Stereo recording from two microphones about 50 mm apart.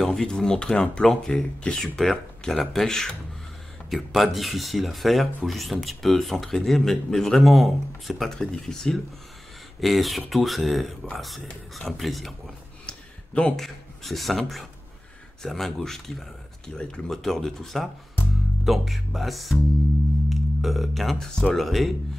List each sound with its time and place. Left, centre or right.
0.0 s speech: centre
3.9 s speech: centre
8.4 s speech: centre
9.8 s speech: centre
12.8 s a sound: left
13.6 s speech: centre